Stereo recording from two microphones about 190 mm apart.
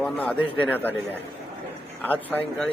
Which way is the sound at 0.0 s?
5° left (ahead or behind).